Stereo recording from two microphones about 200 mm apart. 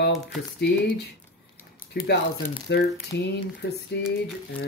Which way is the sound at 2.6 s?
55° left (ahead or behind).